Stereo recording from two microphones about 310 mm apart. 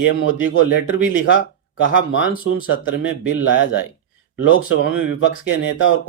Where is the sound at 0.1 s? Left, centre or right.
Left.